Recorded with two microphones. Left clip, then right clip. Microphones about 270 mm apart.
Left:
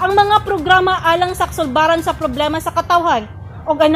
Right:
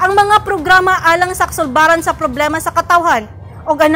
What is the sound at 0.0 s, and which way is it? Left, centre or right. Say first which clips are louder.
A woman's voice: right 2 dB; centre.